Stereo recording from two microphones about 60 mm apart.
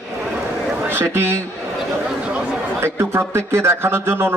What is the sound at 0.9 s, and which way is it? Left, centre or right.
Speech, right.